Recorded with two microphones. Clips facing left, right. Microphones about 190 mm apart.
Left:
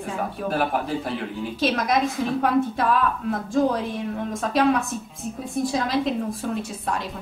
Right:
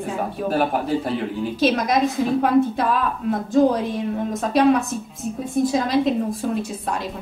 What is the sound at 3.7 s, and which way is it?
A woman's voice, centre (ahead or behind).